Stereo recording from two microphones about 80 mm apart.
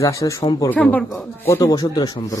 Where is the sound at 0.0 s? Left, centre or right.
Left.